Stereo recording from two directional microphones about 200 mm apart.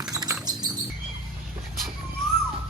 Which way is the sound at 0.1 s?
20° right (ahead or behind).